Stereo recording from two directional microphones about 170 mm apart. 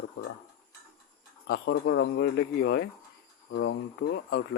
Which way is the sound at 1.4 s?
65° left (ahead or behind).